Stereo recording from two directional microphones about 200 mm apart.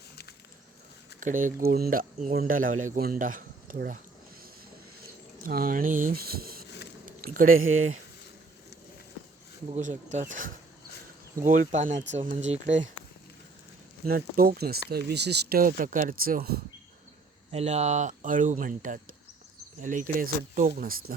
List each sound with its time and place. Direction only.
1.2 s speech: 40° right (ahead or behind)
5.4 s speech: 45° right (ahead or behind)
7.0 s a sound: 45° right (ahead or behind)
7.6 s speech: 90° right
9.7 s speech: 40° right (ahead or behind)
14.0 s speech: 50° right (ahead or behind)
17.5 s speech: 30° right (ahead or behind)